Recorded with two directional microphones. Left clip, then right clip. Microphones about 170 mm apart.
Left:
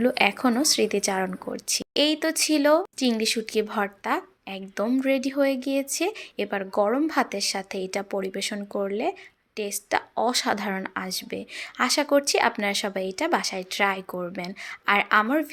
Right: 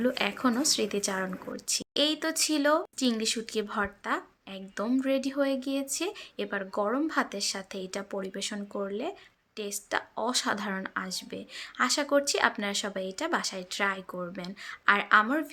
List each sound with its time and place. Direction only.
0.0 s speech: 25° left (ahead or behind)